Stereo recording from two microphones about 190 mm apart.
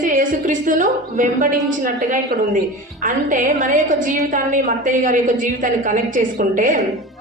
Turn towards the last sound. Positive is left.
turn(degrees=-45)  # may be behind; listen again after turning